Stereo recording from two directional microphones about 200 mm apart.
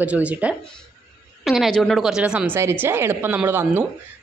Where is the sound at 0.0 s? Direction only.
5° right (ahead or behind).